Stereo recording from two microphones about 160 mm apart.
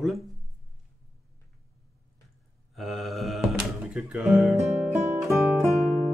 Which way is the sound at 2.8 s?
Centre (ahead or behind).